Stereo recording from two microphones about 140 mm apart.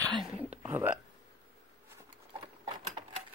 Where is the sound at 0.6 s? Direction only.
15° right (ahead or behind).